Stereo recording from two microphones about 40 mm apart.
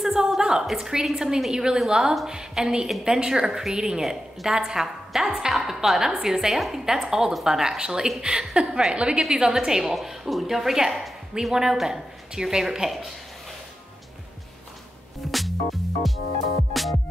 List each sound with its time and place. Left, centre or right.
0.0 s a sound: centre
0.7 s a woman's voice: centre
9.9 s a woman's voice: centre
11.3 s a woman's voice: centre
11.7 s a woman's voice: centre
15.3 s music: centre